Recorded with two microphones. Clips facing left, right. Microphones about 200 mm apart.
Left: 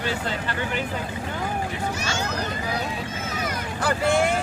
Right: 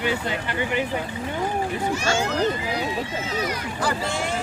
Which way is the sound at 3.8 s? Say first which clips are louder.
Left 5 dB; 55° left (ahead or behind).